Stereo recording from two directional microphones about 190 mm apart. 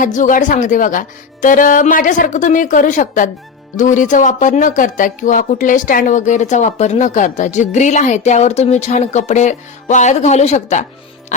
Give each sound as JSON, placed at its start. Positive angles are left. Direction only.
{"t": 0.0, "sound": "speech", "side_deg": 40}